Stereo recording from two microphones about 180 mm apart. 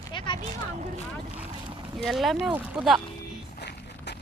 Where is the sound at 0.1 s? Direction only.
25° left (ahead or behind).